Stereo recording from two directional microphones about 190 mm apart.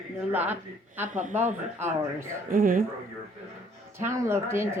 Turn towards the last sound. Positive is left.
turn(degrees=-15)  # may be behind; listen again after turning